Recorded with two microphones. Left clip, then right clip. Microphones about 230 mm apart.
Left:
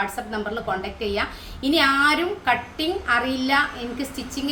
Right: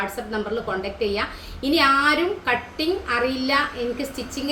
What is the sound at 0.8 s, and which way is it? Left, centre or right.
A woman's voice, centre.